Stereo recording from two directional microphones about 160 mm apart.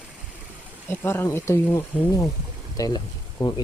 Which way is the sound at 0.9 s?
15° left (ahead or behind).